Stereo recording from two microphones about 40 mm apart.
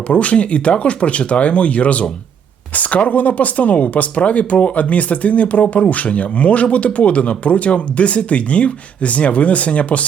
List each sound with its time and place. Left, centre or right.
0.1 s speech: left